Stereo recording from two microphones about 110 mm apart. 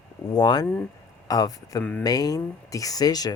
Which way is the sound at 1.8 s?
15° left (ahead or behind).